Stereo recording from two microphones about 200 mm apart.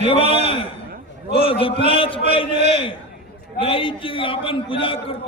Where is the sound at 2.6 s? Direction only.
35° right (ahead or behind).